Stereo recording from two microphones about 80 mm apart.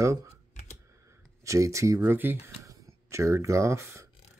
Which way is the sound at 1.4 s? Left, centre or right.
Right.